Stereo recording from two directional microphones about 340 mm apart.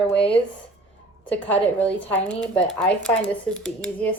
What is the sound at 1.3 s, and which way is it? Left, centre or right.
Speech, centre.